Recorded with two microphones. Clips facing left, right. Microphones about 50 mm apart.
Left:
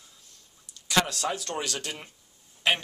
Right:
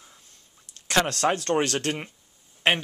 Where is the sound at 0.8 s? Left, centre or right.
Right.